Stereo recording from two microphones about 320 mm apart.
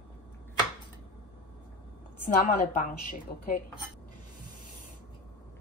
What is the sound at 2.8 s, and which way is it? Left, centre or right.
Speech, left.